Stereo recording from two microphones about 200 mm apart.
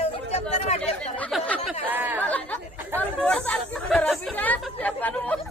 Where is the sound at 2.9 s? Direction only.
10° left (ahead or behind).